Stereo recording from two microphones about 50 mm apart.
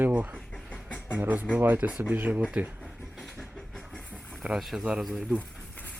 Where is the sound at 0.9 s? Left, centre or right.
Left.